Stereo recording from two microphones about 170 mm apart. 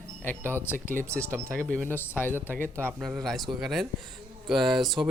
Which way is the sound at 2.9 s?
5° right (ahead or behind).